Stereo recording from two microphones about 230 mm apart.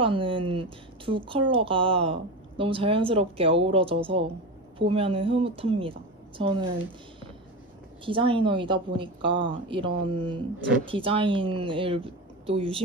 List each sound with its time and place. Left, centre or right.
0.0 s speech: right
8.0 s speech: right